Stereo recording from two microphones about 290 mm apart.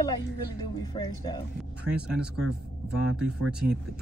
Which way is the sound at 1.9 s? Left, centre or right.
Centre.